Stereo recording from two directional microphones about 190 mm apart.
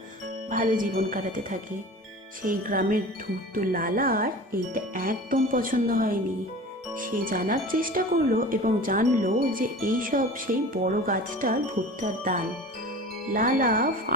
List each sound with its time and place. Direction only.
0.5 s speech: 45° right (ahead or behind)